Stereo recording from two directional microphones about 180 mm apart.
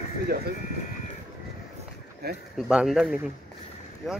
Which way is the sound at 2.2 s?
60° right (ahead or behind).